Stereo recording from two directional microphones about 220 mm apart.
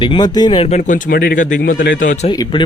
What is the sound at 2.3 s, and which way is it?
Speech, 20° left (ahead or behind).